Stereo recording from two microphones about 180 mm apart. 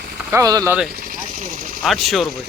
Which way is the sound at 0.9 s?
55° right (ahead or behind).